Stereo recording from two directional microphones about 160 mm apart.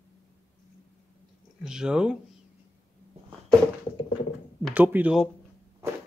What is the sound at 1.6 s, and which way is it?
Speech, 5° right (ahead or behind).